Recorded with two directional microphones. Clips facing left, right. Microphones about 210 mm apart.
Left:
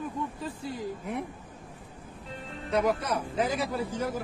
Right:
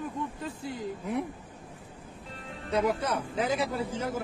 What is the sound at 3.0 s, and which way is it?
Speech, 25° right (ahead or behind).